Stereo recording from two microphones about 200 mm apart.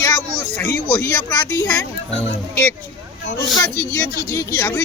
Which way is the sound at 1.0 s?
15° left (ahead or behind).